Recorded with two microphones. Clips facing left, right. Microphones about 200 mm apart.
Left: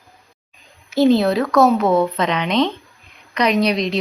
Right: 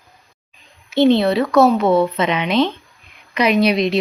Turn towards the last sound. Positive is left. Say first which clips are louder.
# right 2 dB
turn(degrees=-5)  # may be behind; listen again after turning